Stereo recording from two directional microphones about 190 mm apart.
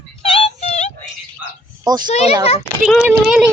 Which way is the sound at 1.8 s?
20° right (ahead or behind).